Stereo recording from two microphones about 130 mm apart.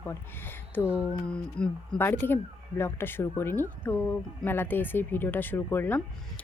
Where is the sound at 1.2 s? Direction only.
10° left (ahead or behind).